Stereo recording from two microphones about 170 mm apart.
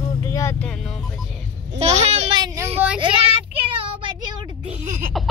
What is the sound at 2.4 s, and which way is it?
Speech, 20° right (ahead or behind).